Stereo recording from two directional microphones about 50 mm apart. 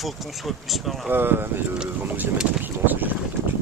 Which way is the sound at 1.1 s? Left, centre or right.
Right.